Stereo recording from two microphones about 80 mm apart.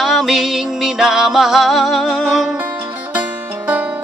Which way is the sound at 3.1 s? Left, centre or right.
Right.